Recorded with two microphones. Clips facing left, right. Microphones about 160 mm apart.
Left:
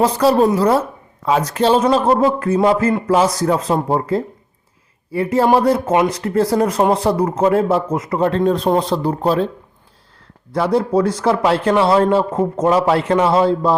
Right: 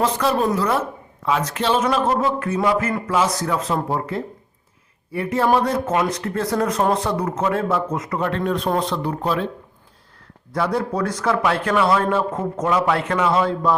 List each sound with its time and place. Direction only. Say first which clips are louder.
0.0 s a man's voice: left 6 dB; 35° left (ahead or behind)
10.5 s a man's voice: left 6 dB; 30° left (ahead or behind)